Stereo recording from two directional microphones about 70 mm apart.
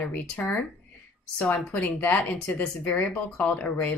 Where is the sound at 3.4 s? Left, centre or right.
Centre.